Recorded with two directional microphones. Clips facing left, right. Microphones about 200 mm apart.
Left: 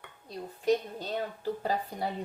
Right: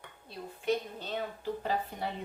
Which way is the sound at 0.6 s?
40° left (ahead or behind).